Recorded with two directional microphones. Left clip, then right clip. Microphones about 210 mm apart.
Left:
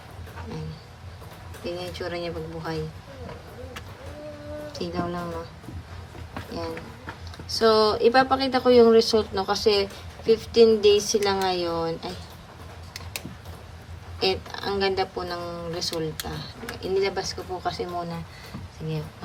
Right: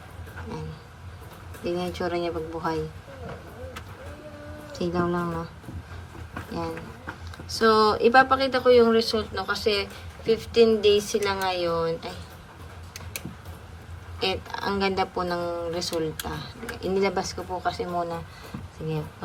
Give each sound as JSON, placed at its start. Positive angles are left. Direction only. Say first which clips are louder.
{"t": 1.6, "sound": "speech", "louder": "right 3 dB", "side_deg": 5}
{"t": 4.7, "sound": "speech", "louder": "right 5 dB", "side_deg": 10}
{"t": 7.7, "sound": "speech", "louder": "right 1 dB", "side_deg": 15}
{"t": 14.2, "sound": "speech", "louder": "left 2 dB", "side_deg": 15}